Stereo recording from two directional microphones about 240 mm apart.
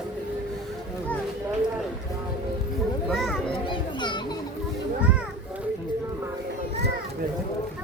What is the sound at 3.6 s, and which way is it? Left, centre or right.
Children playing, centre.